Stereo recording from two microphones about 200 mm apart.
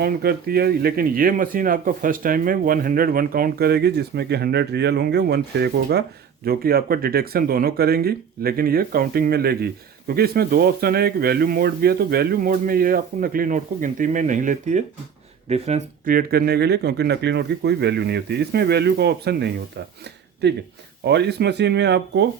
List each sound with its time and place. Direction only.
0.0 s speech: 50° right (ahead or behind)